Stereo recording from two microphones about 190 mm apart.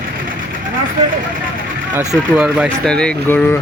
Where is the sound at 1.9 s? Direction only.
5° right (ahead or behind).